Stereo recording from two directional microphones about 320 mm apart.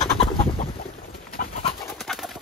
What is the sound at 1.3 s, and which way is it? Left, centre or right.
Pigeon, left.